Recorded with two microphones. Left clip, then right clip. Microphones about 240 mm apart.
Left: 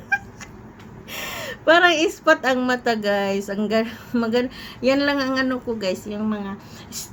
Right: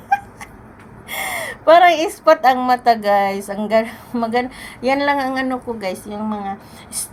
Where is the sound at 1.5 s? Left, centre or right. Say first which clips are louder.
Right 5 dB; centre.